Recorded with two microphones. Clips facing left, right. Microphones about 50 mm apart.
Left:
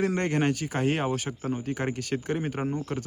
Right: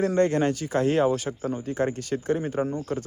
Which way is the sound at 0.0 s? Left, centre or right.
Left.